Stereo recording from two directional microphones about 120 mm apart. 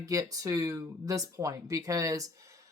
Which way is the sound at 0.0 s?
30° right (ahead or behind).